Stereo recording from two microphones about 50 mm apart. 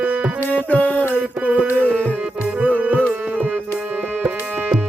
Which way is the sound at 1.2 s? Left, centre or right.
Right.